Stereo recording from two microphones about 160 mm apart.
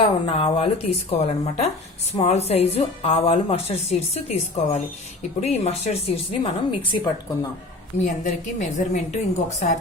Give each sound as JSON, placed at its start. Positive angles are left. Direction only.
{"t": 0.0, "sound": "speech", "side_deg": 35}
{"t": 8.0, "sound": "a woman's voice", "side_deg": 50}